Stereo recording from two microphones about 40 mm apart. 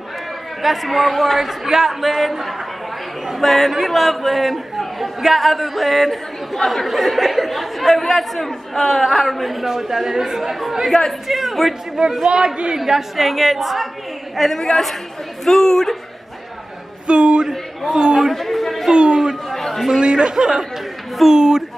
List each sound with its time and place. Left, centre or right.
0.6 s a man's voice: centre
12.0 s speech: centre
12.7 s a man's voice: centre
17.1 s speech: right
17.5 s a man's voice: centre
18.3 s a sound: centre
18.9 s chatter: centre
19.5 s chatter: centre
20.0 s speech: right